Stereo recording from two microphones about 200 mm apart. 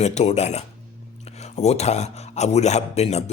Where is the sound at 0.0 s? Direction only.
35° left (ahead or behind).